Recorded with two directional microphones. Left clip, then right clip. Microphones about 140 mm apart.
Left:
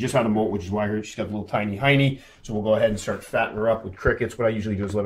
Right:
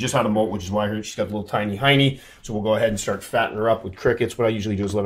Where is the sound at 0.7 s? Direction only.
40° right (ahead or behind).